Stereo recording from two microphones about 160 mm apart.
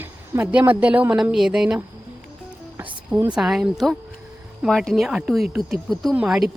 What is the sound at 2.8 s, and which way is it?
Music, 15° right (ahead or behind).